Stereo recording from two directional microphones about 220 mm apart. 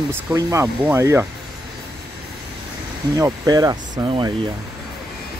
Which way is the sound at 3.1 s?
15° right (ahead or behind).